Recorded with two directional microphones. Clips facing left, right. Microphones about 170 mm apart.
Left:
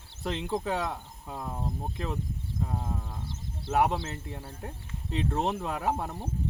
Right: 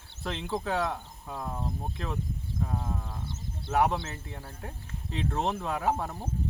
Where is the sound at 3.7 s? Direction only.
10° left (ahead or behind).